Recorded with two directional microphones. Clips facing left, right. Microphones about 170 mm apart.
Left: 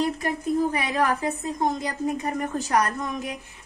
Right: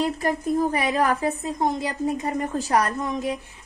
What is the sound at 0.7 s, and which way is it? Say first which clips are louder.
Speech: right 2 dB; 35° right (ahead or behind).